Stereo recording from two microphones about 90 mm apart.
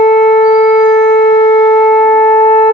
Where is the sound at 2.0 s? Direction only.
25° left (ahead or behind).